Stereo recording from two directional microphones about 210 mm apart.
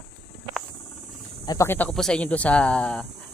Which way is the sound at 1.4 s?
10° left (ahead or behind).